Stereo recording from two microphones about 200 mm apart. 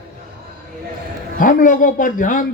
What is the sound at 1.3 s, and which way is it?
A man's voice, 40° left (ahead or behind).